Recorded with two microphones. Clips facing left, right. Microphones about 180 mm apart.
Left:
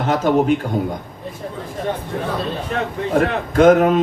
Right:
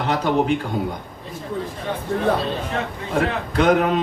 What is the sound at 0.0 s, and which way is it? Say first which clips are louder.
Mantra: left 4 dB; 45° left (ahead or behind).